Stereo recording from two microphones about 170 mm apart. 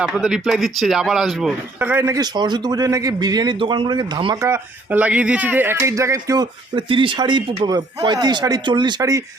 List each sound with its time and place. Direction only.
0.0 s speech: 5° right (ahead or behind); by 4.4 s 25° right (ahead or behind)
4.4 s speech: 15° right (ahead or behind)